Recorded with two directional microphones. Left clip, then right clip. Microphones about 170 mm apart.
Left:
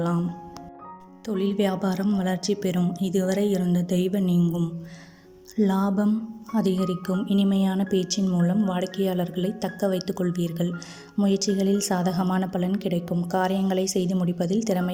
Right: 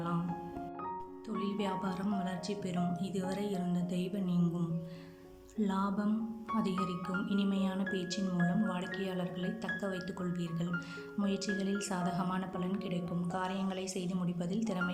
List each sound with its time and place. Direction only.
1.3 s a woman's voice: 45° left (ahead or behind)